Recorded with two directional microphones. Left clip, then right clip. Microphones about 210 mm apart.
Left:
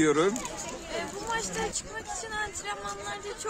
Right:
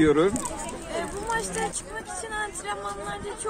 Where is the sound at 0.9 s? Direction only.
Centre (ahead or behind).